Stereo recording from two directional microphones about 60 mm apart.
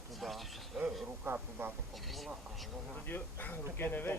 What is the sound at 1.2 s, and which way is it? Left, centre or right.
Speech, right.